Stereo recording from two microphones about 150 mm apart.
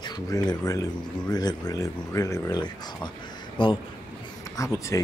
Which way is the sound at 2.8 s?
30° left (ahead or behind).